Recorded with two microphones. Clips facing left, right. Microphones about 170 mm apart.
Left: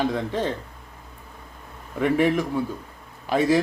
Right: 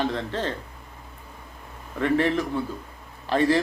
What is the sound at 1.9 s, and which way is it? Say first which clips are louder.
Speech: left 2 dB; 10° left (ahead or behind).